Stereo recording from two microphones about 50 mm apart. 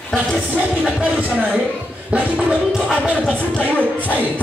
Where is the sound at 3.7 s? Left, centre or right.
Left.